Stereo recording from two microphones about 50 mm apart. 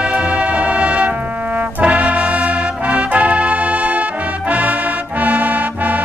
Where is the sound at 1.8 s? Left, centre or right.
Right.